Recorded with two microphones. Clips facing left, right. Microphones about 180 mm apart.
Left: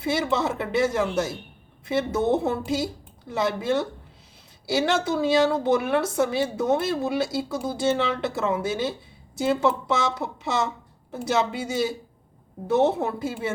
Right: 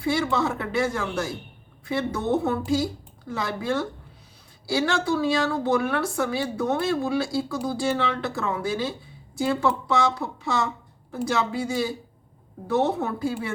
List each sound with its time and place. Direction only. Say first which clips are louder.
0.0 s a woman's voice: even; 25° left (ahead or behind)